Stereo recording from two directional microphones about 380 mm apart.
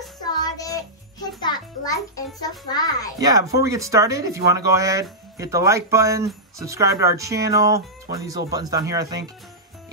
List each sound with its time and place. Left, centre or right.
0.2 s music: centre
3.2 s speech: centre